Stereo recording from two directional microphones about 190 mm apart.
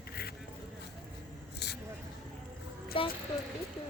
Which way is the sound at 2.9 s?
25° left (ahead or behind).